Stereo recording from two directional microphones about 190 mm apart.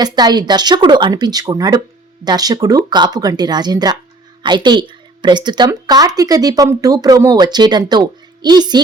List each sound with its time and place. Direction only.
0.0 s a woman's voice: 20° right (ahead or behind)